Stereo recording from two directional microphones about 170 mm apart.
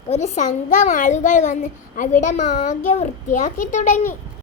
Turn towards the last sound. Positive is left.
turn(degrees=45)  # may be behind; listen again after turning